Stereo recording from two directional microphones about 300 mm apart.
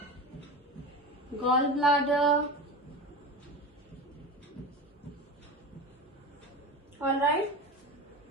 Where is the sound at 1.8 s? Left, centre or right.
Centre.